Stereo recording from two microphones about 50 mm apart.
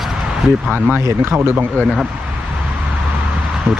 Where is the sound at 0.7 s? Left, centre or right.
Right.